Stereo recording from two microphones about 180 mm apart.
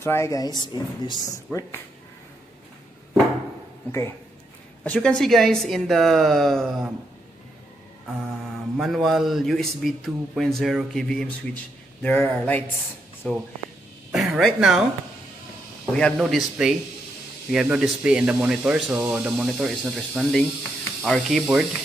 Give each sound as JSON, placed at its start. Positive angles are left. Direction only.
{"t": 0.0, "sound": "speech", "side_deg": 15}
{"t": 4.8, "sound": "speech", "side_deg": 5}
{"t": 8.7, "sound": "speech", "side_deg": 0}
{"t": 16.0, "sound": "speech", "side_deg": 0}